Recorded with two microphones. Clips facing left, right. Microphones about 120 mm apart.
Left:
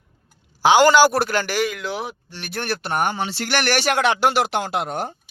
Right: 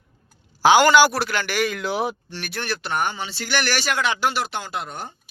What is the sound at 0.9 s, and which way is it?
Speech, 40° left (ahead or behind).